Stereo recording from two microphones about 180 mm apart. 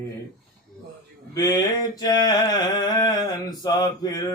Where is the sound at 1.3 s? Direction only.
20° left (ahead or behind).